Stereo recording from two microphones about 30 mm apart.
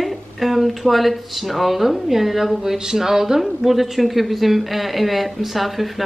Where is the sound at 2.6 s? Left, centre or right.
Centre.